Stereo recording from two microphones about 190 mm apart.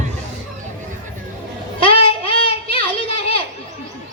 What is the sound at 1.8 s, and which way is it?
Child singing, 30° left (ahead or behind).